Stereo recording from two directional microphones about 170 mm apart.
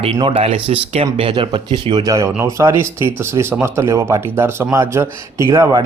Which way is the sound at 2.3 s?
15° right (ahead or behind).